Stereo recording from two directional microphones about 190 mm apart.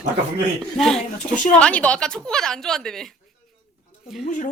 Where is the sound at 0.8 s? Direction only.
Centre (ahead or behind).